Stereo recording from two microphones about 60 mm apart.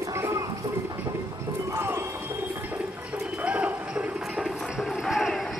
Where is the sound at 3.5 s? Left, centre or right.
Right.